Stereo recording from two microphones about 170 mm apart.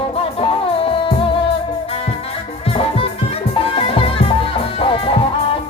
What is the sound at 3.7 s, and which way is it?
Music, 30° left (ahead or behind).